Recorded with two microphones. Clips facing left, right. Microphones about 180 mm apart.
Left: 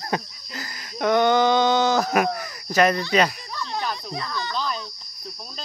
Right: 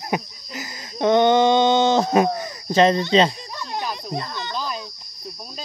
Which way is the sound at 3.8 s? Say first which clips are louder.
Right 1 dB; 10° right (ahead or behind).